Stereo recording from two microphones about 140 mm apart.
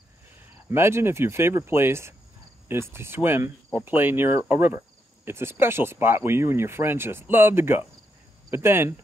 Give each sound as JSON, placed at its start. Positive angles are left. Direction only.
{"t": 0.7, "sound": "speech", "side_deg": -20}